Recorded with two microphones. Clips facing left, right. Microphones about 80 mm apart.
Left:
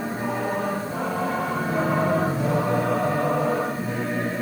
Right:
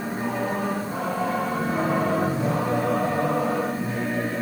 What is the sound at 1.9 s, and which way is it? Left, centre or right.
Music, centre.